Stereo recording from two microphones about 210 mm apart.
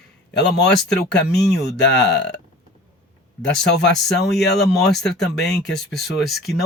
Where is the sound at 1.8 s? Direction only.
55° left (ahead or behind).